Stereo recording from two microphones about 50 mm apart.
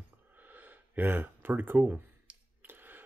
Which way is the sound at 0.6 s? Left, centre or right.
Right.